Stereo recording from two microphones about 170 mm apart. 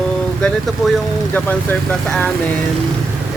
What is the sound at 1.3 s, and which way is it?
Speech, 10° left (ahead or behind).